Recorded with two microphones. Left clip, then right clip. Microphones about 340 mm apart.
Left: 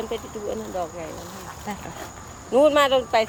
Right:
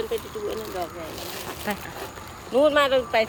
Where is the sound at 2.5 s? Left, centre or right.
Left.